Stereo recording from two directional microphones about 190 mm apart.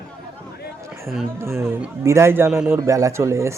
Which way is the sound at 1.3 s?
15° right (ahead or behind).